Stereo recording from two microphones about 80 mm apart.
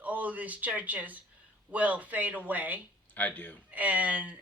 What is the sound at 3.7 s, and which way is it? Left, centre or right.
Speech, centre.